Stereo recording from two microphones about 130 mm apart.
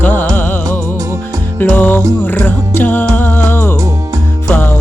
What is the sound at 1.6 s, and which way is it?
Music, 15° left (ahead or behind).